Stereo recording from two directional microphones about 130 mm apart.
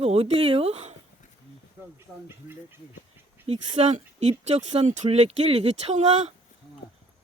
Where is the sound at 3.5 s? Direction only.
60° right (ahead or behind).